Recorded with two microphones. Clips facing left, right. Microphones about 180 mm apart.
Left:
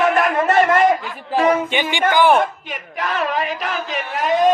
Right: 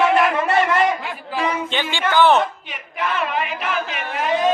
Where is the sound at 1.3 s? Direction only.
45° left (ahead or behind).